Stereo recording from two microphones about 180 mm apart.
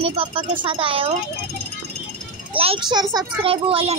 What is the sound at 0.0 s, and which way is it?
Speech, 30° right (ahead or behind).